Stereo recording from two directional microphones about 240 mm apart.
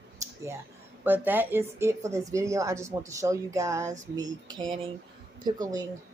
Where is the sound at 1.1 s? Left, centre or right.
Centre.